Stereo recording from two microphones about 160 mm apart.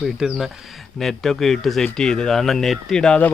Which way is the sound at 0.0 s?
Centre (ahead or behind).